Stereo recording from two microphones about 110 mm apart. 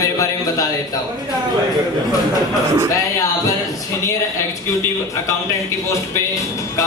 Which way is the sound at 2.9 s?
30° left (ahead or behind).